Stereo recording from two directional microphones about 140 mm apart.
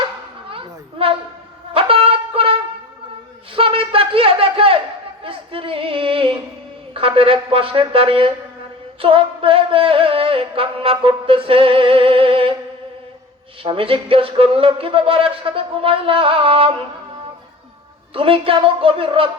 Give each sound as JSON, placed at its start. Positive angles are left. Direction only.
{"t": 0.5, "sound": "a sound", "side_deg": -40}
{"t": 1.7, "sound": "wind instrument", "side_deg": -40}
{"t": 3.5, "sound": "a sound", "side_deg": -40}
{"t": 6.9, "sound": "music", "side_deg": -40}
{"t": 13.6, "sound": "music", "side_deg": -40}
{"t": 18.1, "sound": "music", "side_deg": -40}